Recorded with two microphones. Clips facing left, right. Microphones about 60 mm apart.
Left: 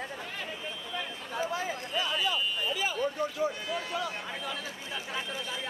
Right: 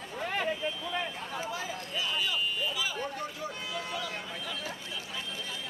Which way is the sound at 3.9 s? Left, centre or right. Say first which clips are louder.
Left 3 dB; left.